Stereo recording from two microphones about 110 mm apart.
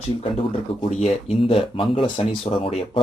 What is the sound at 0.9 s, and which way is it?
Speech, 75° left (ahead or behind).